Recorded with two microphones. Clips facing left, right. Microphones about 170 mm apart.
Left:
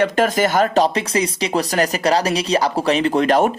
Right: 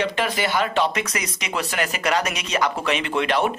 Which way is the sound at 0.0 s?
45° left (ahead or behind).